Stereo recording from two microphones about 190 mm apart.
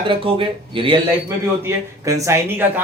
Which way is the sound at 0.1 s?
25° right (ahead or behind).